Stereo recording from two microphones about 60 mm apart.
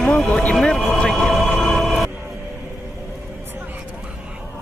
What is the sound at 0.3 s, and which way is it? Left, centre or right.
Speech, centre.